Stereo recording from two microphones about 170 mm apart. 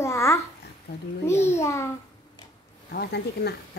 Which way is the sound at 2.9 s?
75° left (ahead or behind).